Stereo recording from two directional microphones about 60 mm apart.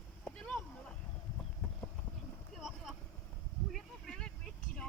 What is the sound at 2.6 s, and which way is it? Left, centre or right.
Boat, centre.